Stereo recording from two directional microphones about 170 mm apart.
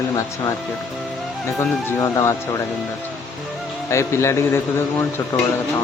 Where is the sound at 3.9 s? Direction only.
15° left (ahead or behind).